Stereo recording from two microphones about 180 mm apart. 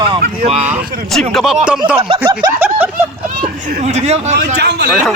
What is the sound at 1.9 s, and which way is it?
Speech, 30° right (ahead or behind).